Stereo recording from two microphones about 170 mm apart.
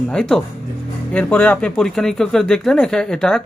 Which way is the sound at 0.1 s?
5° left (ahead or behind).